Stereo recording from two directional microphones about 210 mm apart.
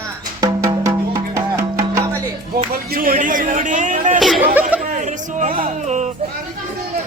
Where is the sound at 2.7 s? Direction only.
45° right (ahead or behind).